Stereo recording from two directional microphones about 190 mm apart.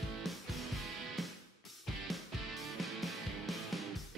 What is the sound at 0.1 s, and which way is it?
Music, centre (ahead or behind).